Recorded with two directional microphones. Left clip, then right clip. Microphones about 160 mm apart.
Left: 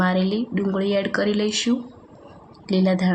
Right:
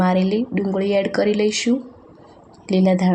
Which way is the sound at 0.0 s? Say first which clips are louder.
Right 3 dB; 15° right (ahead or behind).